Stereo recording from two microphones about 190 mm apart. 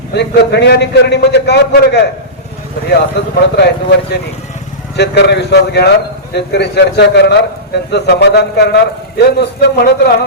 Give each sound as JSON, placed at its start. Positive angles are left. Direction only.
{"t": 0.1, "sound": "a man's voice", "side_deg": 60}